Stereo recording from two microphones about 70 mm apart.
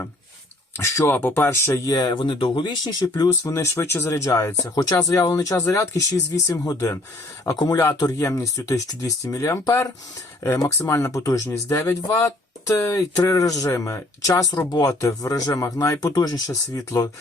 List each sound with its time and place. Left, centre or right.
0.8 s speech: left
1.8 s speech: left
2.6 s speech: left
3.4 s speech: left
4.7 s speech: left
7.4 s speech: left
8.2 s speech: left
14.7 s speech: left
16.0 s speech: left